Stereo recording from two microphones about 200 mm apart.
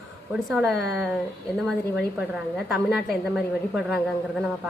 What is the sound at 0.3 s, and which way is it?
A woman's voice, centre (ahead or behind).